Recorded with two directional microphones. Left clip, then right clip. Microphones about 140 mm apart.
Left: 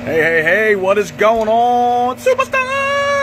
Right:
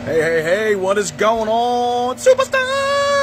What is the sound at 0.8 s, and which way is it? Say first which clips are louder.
Speech: left 3 dB; 25° right (ahead or behind).